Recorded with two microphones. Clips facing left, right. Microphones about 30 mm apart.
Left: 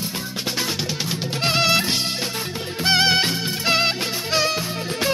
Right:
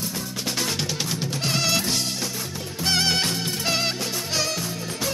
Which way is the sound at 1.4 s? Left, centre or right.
Left.